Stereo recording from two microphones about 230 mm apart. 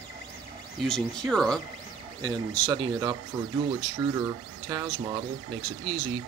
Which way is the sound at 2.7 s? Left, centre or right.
Centre.